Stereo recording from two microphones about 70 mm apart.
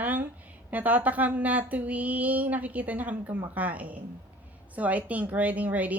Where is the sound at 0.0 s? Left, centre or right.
Right.